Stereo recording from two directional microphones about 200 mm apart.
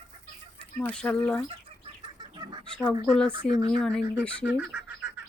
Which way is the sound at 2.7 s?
5° left (ahead or behind).